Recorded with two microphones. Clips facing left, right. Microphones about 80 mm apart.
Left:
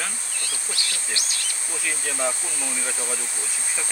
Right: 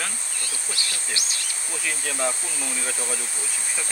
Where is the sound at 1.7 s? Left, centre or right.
Centre.